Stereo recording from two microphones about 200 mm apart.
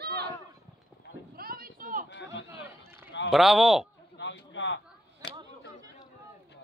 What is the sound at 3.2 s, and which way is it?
Speech, centre (ahead or behind).